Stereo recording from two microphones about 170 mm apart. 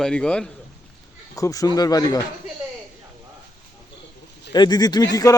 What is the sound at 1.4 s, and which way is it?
Speech, 20° left (ahead or behind).